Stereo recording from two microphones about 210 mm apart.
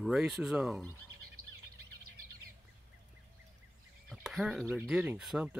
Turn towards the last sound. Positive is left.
turn(degrees=-5)  # may be behind; listen again after turning